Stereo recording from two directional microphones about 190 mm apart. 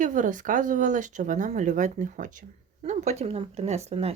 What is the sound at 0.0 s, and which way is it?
Speech, 40° right (ahead or behind).